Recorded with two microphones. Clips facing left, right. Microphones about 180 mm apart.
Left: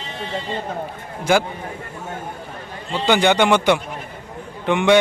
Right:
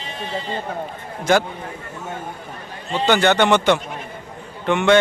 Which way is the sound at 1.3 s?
10° left (ahead or behind).